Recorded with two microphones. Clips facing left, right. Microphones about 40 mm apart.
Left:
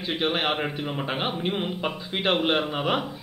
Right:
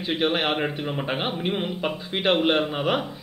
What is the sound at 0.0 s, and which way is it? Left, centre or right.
A man's voice, centre.